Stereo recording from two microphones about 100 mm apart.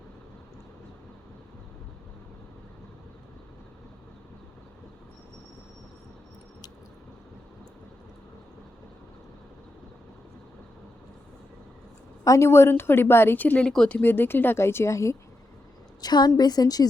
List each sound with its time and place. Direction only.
12.2 s a woman's voice: 30° left (ahead or behind)
16.0 s a woman's voice: 45° left (ahead or behind)